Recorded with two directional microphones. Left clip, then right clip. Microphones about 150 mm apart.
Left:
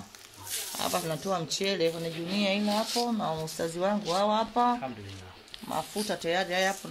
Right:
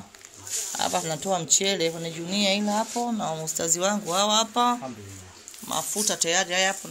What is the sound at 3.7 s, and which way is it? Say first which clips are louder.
Speech: right 4 dB; 15° right (ahead or behind).